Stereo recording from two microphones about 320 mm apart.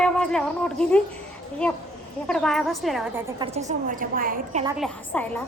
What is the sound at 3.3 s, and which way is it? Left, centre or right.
A woman's voice, centre.